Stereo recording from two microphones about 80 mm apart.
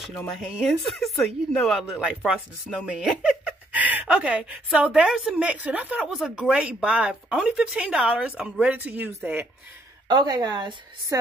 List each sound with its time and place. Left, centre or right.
0.4 s speech: centre
2.0 s speech: centre
6.0 s speech: centre; by 9.5 s right
10.0 s speech: right